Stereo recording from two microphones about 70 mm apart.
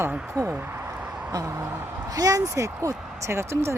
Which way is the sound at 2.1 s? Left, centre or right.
Right.